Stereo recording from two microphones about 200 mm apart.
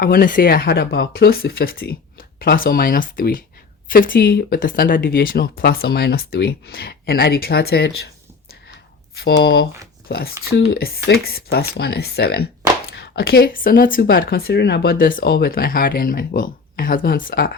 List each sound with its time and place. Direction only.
0.0 s speech: 50° left (ahead or behind)
9.1 s speech: 55° left (ahead or behind)